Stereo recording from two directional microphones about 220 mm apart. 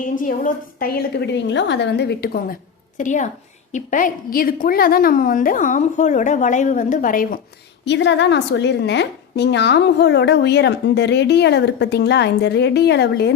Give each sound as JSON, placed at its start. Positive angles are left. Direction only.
{"t": 0.0, "sound": "a woman's voice", "side_deg": 40}
{"t": 7.9, "sound": "a woman's voice", "side_deg": 55}